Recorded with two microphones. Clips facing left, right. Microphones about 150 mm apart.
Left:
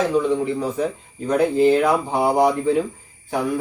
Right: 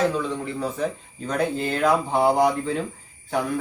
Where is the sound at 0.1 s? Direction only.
15° left (ahead or behind).